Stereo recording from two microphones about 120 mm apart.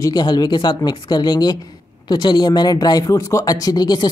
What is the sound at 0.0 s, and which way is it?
Speech, 35° left (ahead or behind).